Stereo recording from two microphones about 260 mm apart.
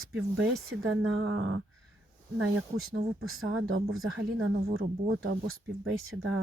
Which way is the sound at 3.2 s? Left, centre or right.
Right.